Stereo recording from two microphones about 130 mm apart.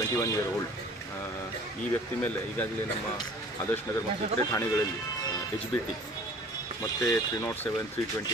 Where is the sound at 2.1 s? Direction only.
15° left (ahead or behind).